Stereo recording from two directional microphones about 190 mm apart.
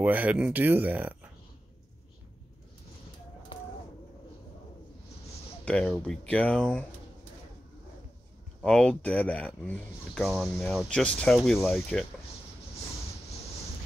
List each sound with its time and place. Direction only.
0.0 s speech: 10° right (ahead or behind)
5.7 s speech: 5° left (ahead or behind)
8.6 s speech: 5° left (ahead or behind)